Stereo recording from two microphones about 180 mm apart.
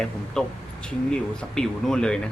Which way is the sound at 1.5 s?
5° left (ahead or behind).